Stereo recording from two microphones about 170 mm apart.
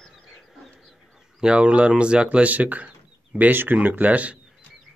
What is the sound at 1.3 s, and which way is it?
Speech, 5° right (ahead or behind).